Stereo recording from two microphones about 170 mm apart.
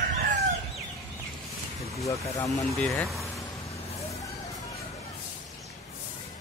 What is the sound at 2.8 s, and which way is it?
Speech, centre (ahead or behind).